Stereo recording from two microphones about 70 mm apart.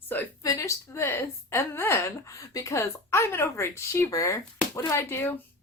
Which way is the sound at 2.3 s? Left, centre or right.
Left.